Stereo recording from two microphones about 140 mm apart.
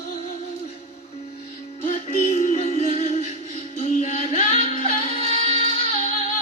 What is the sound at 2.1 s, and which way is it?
Music, 55° left (ahead or behind).